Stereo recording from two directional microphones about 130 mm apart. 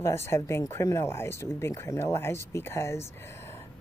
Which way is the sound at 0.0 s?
20° left (ahead or behind).